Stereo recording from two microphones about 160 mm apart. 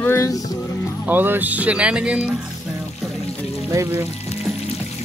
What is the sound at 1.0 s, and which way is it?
Speech, 10° right (ahead or behind).